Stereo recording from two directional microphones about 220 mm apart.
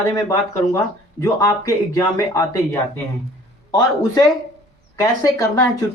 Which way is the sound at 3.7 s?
15° left (ahead or behind).